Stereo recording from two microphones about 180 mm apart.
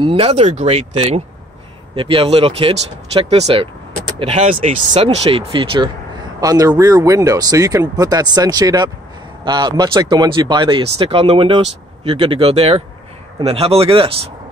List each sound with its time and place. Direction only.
0.0 s speech: 30° right (ahead or behind)
4.9 s speech: 35° right (ahead or behind)